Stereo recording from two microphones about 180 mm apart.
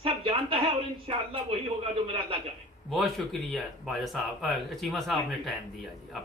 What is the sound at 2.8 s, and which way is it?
Speech, centre (ahead or behind).